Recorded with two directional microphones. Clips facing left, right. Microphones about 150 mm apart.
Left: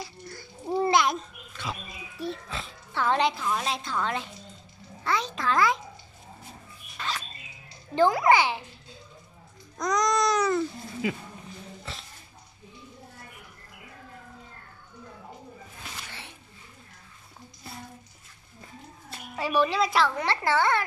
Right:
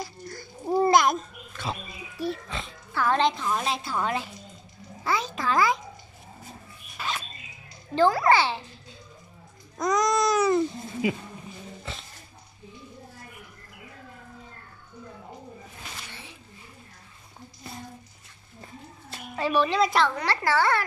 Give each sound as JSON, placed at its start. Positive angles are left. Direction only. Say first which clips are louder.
{"t": 0.0, "sound": "babbling", "louder": "right 3 dB", "side_deg": -45}
{"t": 2.1, "sound": "oink", "louder": "right 3 dB", "side_deg": 0}
{"t": 2.9, "sound": "music", "louder": "right 1 dB", "side_deg": 25}
{"t": 3.2, "sound": "a woman's voice", "louder": "right 1 dB", "side_deg": 5}
{"t": 7.0, "sound": "rodents", "louder": "right 1 dB", "side_deg": -5}
{"t": 7.9, "sound": "a child's voice", "louder": "even", "side_deg": 20}
{"t": 9.8, "sound": "a woman's voice", "louder": "right 2 dB", "side_deg": 0}
{"t": 11.8, "sound": "a sound", "louder": "right 2 dB", "side_deg": 0}
{"t": 19.3, "sound": "a woman's voice", "louder": "right 1 dB", "side_deg": 10}
{"t": 20.2, "sound": "a woman's voice", "louder": "right 1 dB", "side_deg": 20}